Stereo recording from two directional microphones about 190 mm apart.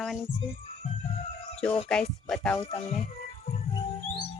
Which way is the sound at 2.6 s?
30° left (ahead or behind).